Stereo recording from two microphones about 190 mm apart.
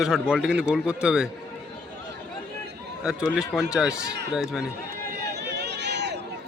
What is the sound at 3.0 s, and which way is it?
A man's voice, 5° right (ahead or behind).